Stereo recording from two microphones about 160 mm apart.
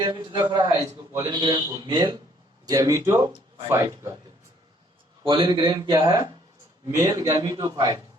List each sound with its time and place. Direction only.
0.0 s a man's voice: 30° right (ahead or behind)
5.2 s a man's voice: 30° right (ahead or behind)